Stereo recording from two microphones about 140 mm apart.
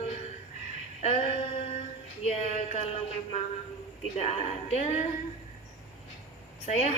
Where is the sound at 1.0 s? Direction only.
45° left (ahead or behind).